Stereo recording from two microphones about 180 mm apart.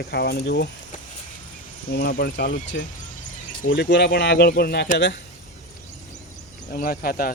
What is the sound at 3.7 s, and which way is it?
Speech, 70° left (ahead or behind).